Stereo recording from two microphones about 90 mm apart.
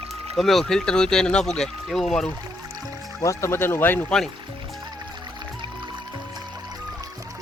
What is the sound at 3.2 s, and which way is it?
Speech, 30° left (ahead or behind).